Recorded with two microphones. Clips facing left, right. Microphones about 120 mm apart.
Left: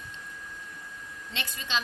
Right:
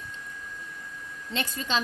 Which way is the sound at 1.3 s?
40° right (ahead or behind).